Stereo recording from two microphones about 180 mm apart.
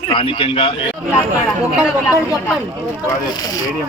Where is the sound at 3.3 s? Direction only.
20° left (ahead or behind).